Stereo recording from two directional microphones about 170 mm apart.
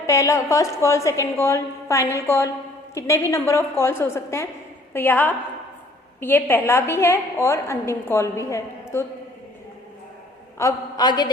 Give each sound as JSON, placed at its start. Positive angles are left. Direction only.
{"t": 0.0, "sound": "a woman's voice", "side_deg": 20}
{"t": 10.6, "sound": "a man's voice", "side_deg": 20}